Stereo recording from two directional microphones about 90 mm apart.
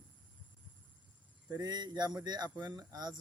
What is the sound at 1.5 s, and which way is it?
Speech, 45° right (ahead or behind).